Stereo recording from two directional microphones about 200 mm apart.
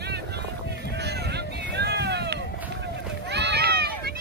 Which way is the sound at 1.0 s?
55° right (ahead or behind).